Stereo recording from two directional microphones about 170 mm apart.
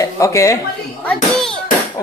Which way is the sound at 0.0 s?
20° left (ahead or behind).